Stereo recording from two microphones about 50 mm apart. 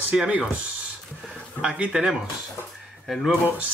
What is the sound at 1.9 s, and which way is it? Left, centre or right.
Speech, centre.